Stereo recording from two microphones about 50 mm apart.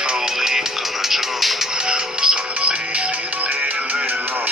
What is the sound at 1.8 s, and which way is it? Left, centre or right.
Music, centre.